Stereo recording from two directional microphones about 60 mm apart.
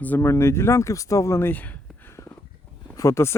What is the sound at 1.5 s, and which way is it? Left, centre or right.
Speech, left.